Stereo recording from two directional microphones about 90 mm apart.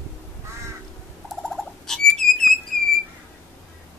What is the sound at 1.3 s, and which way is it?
Bird, 5° left (ahead or behind).